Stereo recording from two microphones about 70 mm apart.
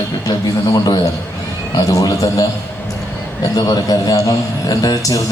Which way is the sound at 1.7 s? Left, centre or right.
Left.